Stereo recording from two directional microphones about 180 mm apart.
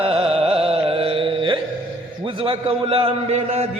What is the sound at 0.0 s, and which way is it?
Carnatic music, 35° right (ahead or behind).